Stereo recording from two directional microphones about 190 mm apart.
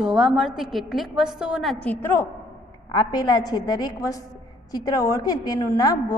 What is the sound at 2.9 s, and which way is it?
A woman's voice, 20° left (ahead or behind).